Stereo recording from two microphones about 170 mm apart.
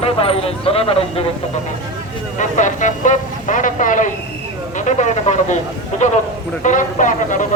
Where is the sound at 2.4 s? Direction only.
45° left (ahead or behind).